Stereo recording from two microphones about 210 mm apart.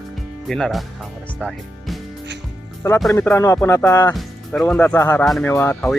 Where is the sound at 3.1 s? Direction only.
10° left (ahead or behind).